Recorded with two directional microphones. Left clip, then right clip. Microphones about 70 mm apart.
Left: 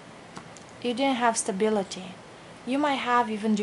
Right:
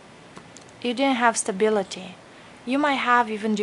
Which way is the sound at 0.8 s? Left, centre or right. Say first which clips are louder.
Right 3 dB; right.